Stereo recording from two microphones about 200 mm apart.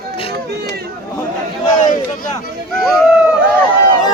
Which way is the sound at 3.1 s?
5° right (ahead or behind).